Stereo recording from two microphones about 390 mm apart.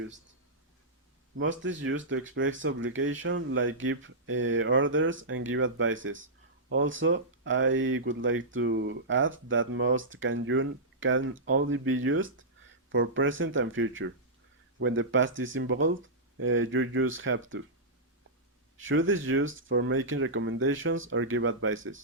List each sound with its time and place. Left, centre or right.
1.4 s speech: right
18.8 s speech: right